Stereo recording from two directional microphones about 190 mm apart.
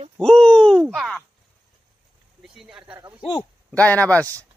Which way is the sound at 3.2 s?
25° left (ahead or behind).